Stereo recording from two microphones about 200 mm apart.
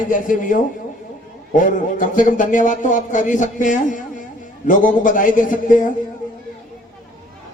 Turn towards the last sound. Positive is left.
turn(degrees=40)  # may be behind; listen again after turning